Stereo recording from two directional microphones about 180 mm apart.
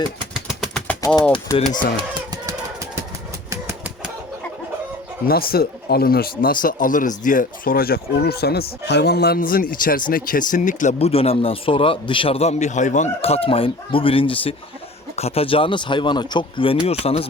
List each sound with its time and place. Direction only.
0.4 s a sound: centre (ahead or behind)
1.3 s speech: 25° left (ahead or behind)
3.5 s pigeon: 10° right (ahead or behind)
5.3 s speech: 55° left (ahead or behind); by 17.2 s 35° left (ahead or behind)